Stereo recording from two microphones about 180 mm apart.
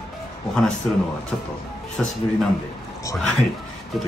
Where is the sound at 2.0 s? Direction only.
Centre (ahead or behind).